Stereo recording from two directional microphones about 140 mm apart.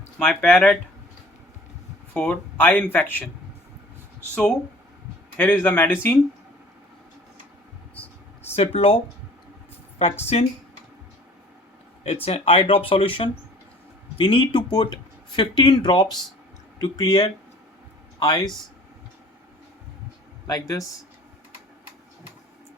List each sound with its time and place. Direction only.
0.2 s speech: 10° left (ahead or behind)
2.1 s speech: 10° left (ahead or behind)
5.4 s speech: 15° left (ahead or behind)
8.5 s speech: 45° left (ahead or behind)
10.0 s speech: 50° left (ahead or behind)
12.0 s speech: 45° left (ahead or behind); by 18.4 s 25° left (ahead or behind)
20.5 s speech: 25° left (ahead or behind)